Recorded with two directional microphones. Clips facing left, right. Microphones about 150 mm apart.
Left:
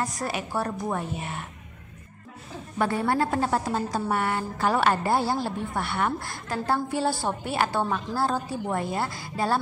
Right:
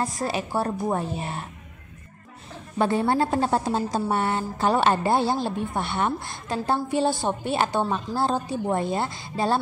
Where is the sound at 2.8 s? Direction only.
25° right (ahead or behind).